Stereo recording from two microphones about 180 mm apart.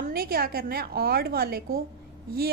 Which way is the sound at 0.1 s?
60° right (ahead or behind).